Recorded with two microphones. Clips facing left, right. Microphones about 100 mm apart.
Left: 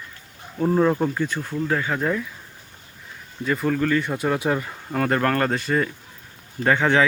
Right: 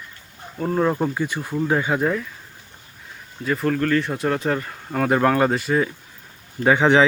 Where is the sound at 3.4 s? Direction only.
Centre (ahead or behind).